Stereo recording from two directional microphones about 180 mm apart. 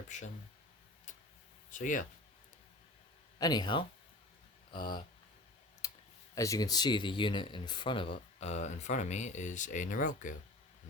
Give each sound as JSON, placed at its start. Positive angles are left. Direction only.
{"t": 0.1, "sound": "speech", "side_deg": 45}
{"t": 1.7, "sound": "speech", "side_deg": 45}
{"t": 3.3, "sound": "speech", "side_deg": 20}
{"t": 5.8, "sound": "computer keyboard", "side_deg": 20}
{"t": 6.3, "sound": "speech", "side_deg": 20}